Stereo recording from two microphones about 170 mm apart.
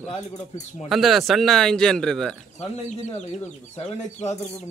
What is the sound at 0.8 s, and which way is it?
Speech, centre (ahead or behind).